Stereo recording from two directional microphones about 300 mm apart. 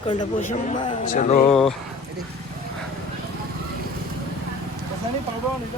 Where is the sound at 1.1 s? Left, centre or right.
Left.